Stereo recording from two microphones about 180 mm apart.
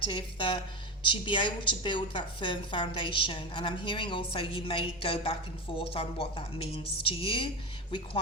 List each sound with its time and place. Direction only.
0.1 s a woman's voice: 25° left (ahead or behind)